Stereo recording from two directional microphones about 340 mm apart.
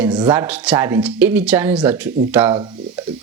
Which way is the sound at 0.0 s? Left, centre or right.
Centre.